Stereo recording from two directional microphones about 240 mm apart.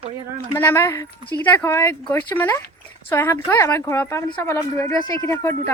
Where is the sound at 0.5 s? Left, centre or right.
Centre.